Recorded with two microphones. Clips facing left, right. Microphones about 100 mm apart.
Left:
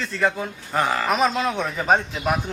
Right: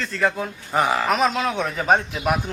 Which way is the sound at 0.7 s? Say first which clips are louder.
Right 2 dB; 15° right (ahead or behind).